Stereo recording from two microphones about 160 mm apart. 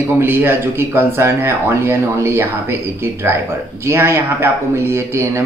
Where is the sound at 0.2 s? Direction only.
15° right (ahead or behind).